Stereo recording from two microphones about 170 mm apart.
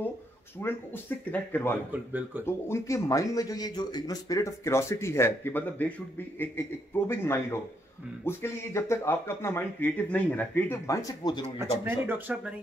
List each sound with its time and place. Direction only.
0.6 s speech: 15° left (ahead or behind)
1.9 s speech: 10° right (ahead or behind)
2.4 s speech: 15° left (ahead or behind)
7.1 s speech: 15° left (ahead or behind)
11.4 s speech: 15° right (ahead or behind)